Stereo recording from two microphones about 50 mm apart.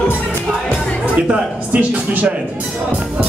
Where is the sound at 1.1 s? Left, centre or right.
Right.